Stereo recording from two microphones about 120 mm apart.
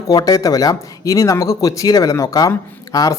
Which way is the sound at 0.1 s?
30° left (ahead or behind).